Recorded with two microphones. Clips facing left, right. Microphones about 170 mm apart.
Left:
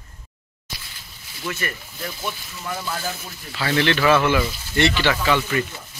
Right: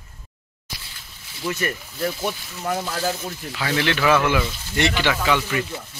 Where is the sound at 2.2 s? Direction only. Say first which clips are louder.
Right 4 dB; 45° right (ahead or behind).